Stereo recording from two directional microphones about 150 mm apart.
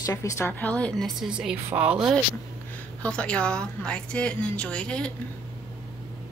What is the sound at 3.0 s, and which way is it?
A woman's voice, 5° left (ahead or behind).